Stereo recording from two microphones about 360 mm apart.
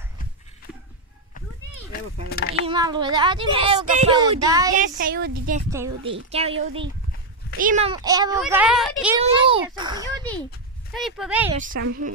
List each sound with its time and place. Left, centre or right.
2.2 s speech: left
2.6 s speech: centre
4.7 s speech: right
5.7 s speech: centre
7.5 s speech: right; by 9.2 s centre
9.2 s a child's voice: centre
10.9 s speech: centre
11.5 s speech: right